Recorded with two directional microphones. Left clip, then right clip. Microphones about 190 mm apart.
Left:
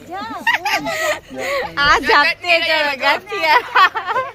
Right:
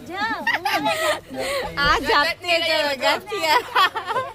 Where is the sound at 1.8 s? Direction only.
40° left (ahead or behind).